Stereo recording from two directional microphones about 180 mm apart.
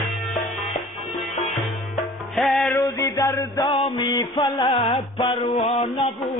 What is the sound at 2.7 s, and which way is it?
Music, 15° left (ahead or behind).